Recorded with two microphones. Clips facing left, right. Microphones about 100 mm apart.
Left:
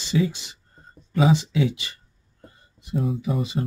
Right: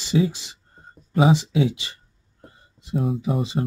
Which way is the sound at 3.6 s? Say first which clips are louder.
Right 2 dB; 45° right (ahead or behind).